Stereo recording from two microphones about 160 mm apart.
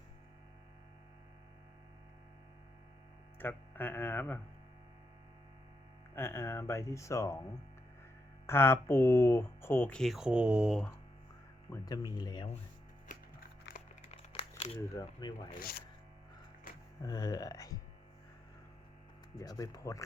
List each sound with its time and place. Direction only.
3.3 s speech: 10° left (ahead or behind)
6.1 s speech: 15° left (ahead or behind)
8.4 s speech: 15° left (ahead or behind)
11.7 s speech: 25° left (ahead or behind)
13.7 s music: 90° left
14.1 s crumpling: 40° left (ahead or behind)
14.9 s speech: 20° left (ahead or behind)
17.0 s speech: 25° left (ahead or behind)
19.4 s speech: 20° left (ahead or behind)